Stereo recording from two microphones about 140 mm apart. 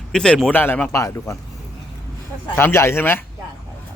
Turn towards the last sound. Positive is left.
turn(degrees=15)  # may be behind; listen again after turning